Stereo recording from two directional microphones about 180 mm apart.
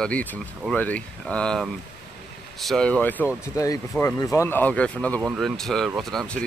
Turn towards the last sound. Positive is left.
turn(degrees=5)  # may be behind; listen again after turning